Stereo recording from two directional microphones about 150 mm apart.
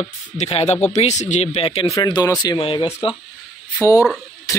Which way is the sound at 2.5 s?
35° left (ahead or behind).